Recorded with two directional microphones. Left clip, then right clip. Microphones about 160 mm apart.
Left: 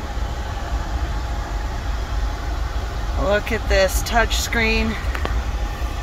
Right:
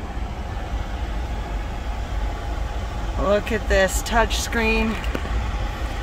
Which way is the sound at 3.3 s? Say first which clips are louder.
Left 1 dB; 25° right (ahead or behind).